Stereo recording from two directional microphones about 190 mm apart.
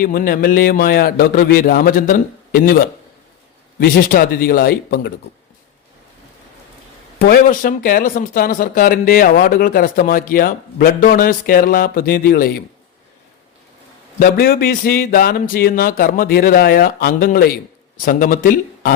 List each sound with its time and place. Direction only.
0.0 s speech: 50° left (ahead or behind)
7.2 s speech: 45° left (ahead or behind)
14.2 s speech: 50° left (ahead or behind)